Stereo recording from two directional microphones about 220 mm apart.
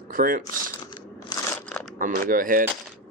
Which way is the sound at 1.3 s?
20° left (ahead or behind).